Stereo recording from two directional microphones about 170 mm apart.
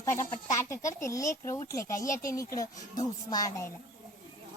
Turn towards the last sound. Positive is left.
turn(degrees=20)  # may be behind; listen again after turning